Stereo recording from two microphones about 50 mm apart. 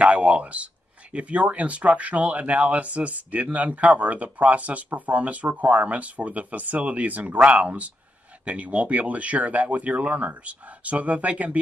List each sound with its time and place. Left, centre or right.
0.0 s speech: right